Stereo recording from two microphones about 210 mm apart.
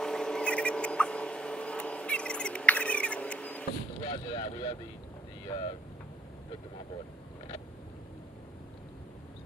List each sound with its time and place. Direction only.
0.0 s rodents: 5° left (ahead or behind)
4.0 s boat: 25° left (ahead or behind)
5.5 s speech: 20° left (ahead or behind)